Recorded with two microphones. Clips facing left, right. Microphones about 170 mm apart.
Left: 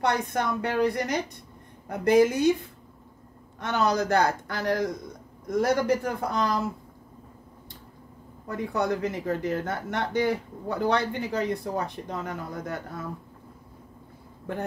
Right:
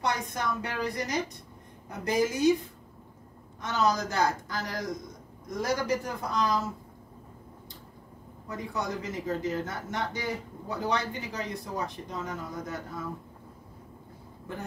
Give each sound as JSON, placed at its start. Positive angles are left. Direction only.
{"t": 0.0, "sound": "speech", "side_deg": 60}
{"t": 3.6, "sound": "speech", "side_deg": 60}
{"t": 8.5, "sound": "speech", "side_deg": 60}